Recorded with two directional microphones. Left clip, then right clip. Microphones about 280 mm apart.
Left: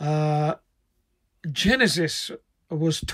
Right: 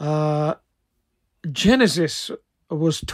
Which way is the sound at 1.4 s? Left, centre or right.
Centre.